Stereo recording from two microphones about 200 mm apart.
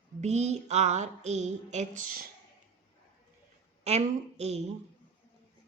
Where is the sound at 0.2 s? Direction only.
35° right (ahead or behind).